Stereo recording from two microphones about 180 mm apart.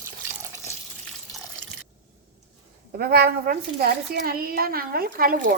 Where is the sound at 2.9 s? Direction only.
60° right (ahead or behind).